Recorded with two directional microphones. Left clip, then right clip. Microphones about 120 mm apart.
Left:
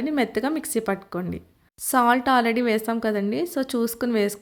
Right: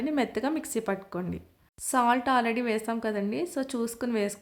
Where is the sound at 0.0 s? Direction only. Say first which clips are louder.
Left 4 dB; 25° left (ahead or behind).